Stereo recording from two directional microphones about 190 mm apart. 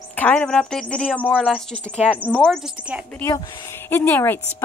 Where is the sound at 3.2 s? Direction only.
15° left (ahead or behind).